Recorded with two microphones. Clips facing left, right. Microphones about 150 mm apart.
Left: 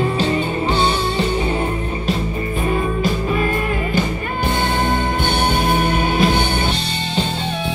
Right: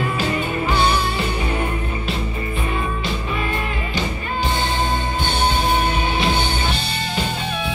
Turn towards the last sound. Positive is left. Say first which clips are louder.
# left 4 dB
turn(degrees=55)  # may be behind; listen again after turning